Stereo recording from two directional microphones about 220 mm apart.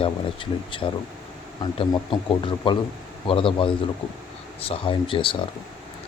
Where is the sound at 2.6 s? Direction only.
25° left (ahead or behind).